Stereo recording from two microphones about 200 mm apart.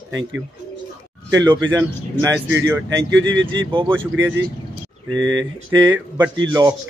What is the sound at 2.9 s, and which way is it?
Speech, 65° right (ahead or behind).